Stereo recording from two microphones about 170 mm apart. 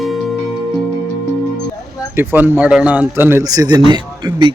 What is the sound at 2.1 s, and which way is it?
Speech, 15° right (ahead or behind).